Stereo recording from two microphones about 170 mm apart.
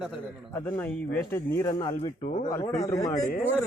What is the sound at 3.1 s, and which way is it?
Speech, 45° left (ahead or behind).